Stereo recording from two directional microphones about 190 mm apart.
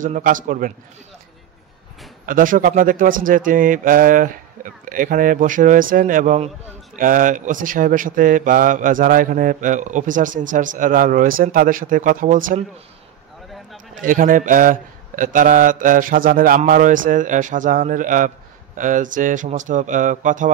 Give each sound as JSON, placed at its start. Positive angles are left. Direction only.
{"t": 0.0, "sound": "speech", "side_deg": -45}
{"t": 2.2, "sound": "speech", "side_deg": -45}
{"t": 13.9, "sound": "speech", "side_deg": -45}